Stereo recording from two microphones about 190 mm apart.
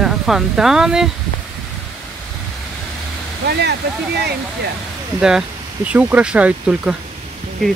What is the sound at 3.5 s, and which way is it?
Speech, 60° right (ahead or behind).